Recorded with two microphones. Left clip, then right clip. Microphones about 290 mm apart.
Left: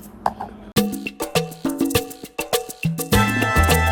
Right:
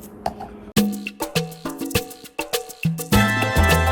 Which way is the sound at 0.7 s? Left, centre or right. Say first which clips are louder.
Left 1 dB; left.